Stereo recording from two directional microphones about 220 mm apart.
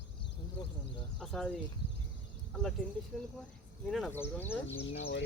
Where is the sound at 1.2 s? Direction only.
Centre (ahead or behind).